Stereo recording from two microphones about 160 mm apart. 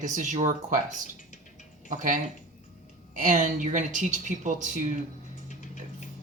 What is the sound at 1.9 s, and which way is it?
Speech, 55° right (ahead or behind).